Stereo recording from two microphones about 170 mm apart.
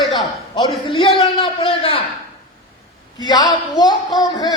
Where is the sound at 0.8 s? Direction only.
30° left (ahead or behind).